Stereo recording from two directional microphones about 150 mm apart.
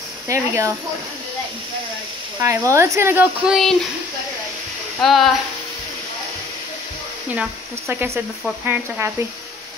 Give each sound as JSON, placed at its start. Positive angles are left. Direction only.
{"t": 0.3, "sound": "speech", "side_deg": -20}
{"t": 2.4, "sound": "speech", "side_deg": -20}
{"t": 3.4, "sound": "speech", "side_deg": 0}
{"t": 5.0, "sound": "speech", "side_deg": 0}
{"t": 7.9, "sound": "speech", "side_deg": -15}